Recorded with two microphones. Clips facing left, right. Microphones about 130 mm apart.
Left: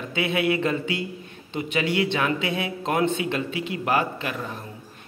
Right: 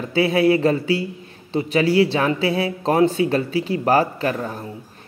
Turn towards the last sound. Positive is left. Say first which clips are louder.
# right 6 dB
turn(degrees=-40)  # may be behind; listen again after turning